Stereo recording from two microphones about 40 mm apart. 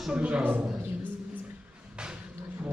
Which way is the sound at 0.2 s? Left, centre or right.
Right.